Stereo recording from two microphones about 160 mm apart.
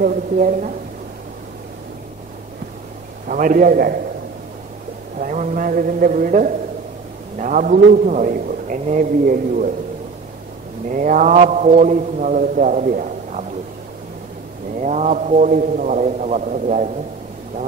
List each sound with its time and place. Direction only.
0.0 s a man's voice: 60° right (ahead or behind)
3.3 s a man's voice: 60° right (ahead or behind)
5.2 s a man's voice: 55° right (ahead or behind)
10.9 s a man's voice: 55° right (ahead or behind)
14.8 s a man's voice: 45° right (ahead or behind)